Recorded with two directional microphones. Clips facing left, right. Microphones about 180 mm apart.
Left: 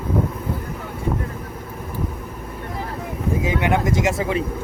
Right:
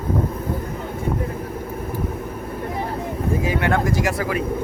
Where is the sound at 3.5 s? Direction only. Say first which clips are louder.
Left 1 dB; 15° left (ahead or behind).